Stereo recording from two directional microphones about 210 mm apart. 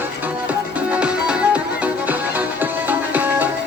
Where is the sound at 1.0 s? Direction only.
5° right (ahead or behind).